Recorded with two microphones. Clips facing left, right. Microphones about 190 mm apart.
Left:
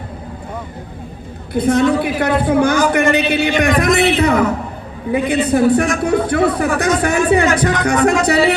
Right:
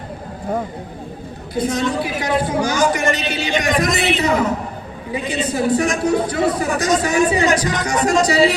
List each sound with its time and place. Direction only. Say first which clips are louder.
1.5 s a man's voice: left 6 dB; 60° left (ahead or behind)